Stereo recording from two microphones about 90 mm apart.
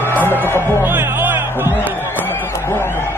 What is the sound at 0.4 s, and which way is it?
Music, 25° left (ahead or behind).